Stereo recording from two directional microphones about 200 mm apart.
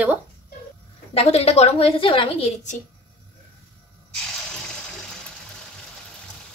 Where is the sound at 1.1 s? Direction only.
30° left (ahead or behind).